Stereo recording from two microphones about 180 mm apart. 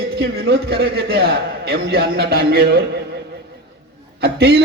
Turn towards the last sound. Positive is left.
turn(degrees=-65)  # may be behind; listen again after turning